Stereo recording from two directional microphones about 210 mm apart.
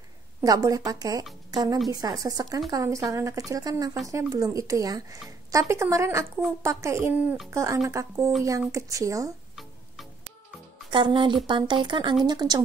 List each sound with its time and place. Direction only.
0.4 s a woman's voice: 15° right (ahead or behind)
9.6 s music: centre (ahead or behind)
10.9 s speech: 25° right (ahead or behind)